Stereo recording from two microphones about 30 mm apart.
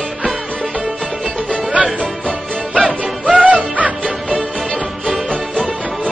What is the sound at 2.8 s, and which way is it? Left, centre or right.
Music, right.